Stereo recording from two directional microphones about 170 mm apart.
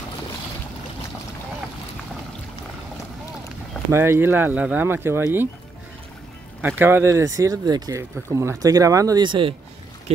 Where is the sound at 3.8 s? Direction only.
15° right (ahead or behind).